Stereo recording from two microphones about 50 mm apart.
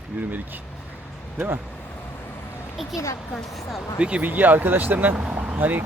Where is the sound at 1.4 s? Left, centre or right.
Right.